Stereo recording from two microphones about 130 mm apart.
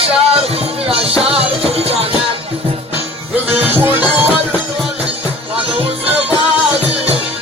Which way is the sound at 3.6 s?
15° right (ahead or behind).